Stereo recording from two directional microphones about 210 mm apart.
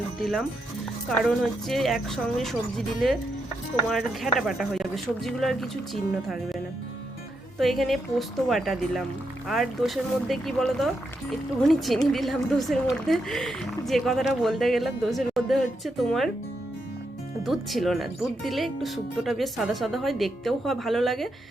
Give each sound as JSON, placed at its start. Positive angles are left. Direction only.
{"t": 1.0, "sound": "speech", "side_deg": 0}
{"t": 7.6, "sound": "speech", "side_deg": 0}
{"t": 17.4, "sound": "speech", "side_deg": 0}